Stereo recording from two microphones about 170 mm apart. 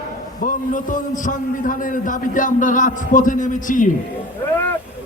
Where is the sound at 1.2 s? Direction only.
50° left (ahead or behind).